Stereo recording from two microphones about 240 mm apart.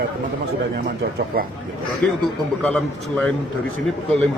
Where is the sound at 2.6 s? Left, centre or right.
Centre.